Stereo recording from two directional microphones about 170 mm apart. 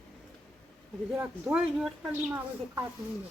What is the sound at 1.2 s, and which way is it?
A woman's voice, 5° right (ahead or behind).